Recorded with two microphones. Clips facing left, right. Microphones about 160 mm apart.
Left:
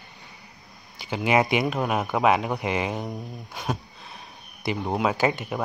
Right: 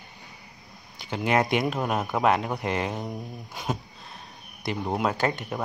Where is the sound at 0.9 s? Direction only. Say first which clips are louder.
Left 2 dB; centre (ahead or behind).